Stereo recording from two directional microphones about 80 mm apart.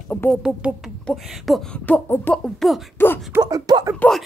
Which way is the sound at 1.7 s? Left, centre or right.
Centre.